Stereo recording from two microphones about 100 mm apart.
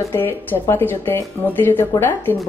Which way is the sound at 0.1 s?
20° left (ahead or behind).